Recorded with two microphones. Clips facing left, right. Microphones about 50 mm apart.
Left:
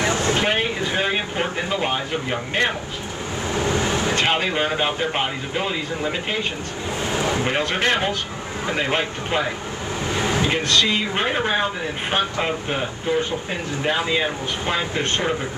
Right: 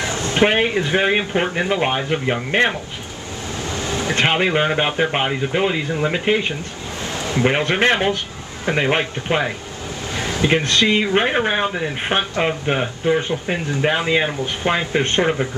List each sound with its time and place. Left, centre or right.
0.0 s a sound: left
0.4 s speech: right
3.5 s vehicle: left
4.1 s speech: right
7.4 s speech: right
10.5 s speech: right